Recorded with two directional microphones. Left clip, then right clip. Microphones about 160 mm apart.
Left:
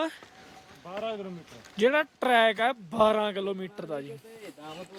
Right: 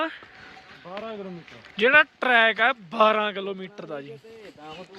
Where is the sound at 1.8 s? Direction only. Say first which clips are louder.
Right 6 dB; 30° left (ahead or behind).